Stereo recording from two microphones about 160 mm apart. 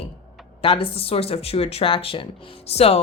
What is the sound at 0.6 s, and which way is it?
A woman's voice, 35° left (ahead or behind).